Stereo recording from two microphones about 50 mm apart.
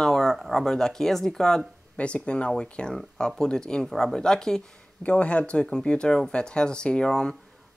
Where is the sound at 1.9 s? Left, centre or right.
Left.